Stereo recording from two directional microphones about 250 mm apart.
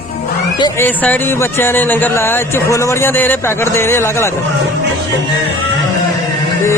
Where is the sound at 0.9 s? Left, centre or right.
Centre.